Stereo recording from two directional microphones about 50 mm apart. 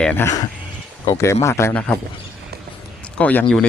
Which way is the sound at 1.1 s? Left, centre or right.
Left.